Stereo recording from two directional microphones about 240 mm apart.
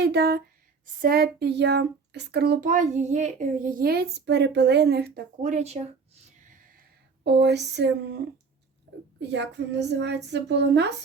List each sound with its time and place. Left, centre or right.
0.0 s speech: right
7.3 s speech: right
9.3 s speech: right